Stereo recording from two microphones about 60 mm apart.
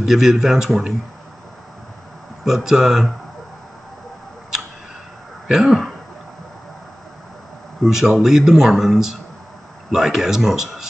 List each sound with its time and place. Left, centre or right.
0.0 s speech: centre
2.4 s speech: centre
5.5 s speech: centre
7.8 s speech: centre